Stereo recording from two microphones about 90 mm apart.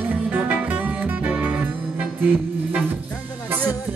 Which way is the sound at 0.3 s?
20° right (ahead or behind).